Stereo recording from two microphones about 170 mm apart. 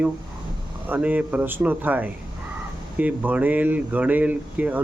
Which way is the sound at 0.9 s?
10° right (ahead or behind).